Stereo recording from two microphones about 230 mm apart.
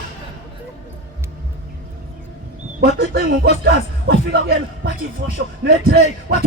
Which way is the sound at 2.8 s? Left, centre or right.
Right.